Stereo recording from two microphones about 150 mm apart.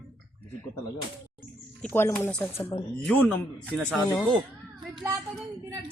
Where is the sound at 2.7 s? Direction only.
30° left (ahead or behind).